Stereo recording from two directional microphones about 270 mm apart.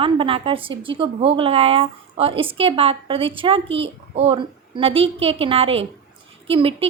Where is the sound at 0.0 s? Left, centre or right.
Centre.